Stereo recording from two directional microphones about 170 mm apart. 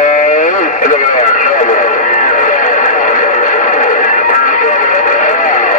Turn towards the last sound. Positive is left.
turn(degrees=50)  # may be behind; listen again after turning